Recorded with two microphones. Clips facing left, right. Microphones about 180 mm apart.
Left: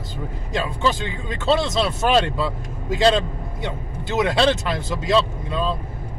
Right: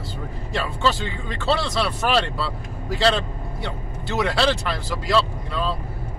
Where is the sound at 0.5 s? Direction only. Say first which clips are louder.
Left 1 dB; 15° left (ahead or behind).